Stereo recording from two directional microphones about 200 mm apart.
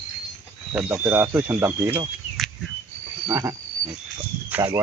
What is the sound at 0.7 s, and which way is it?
Speech, 10° right (ahead or behind).